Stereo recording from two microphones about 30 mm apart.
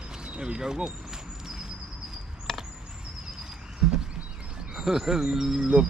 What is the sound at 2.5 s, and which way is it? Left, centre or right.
Chop, centre.